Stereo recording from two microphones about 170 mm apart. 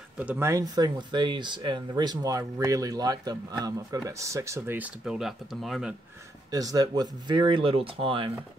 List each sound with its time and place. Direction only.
0.2 s speech: 10° right (ahead or behind)
6.5 s speech: 20° right (ahead or behind)